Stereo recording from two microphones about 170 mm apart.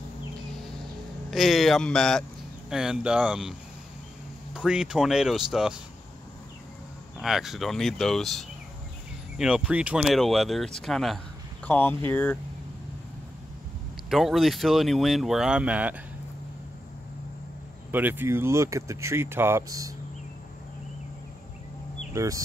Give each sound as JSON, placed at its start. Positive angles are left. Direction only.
{"t": 1.3, "sound": "speech", "side_deg": 0}
{"t": 4.6, "sound": "speech", "side_deg": -5}
{"t": 7.2, "sound": "speech", "side_deg": 0}
{"t": 14.1, "sound": "speech", "side_deg": 0}
{"t": 17.9, "sound": "speech", "side_deg": -10}
{"t": 22.1, "sound": "speech", "side_deg": -20}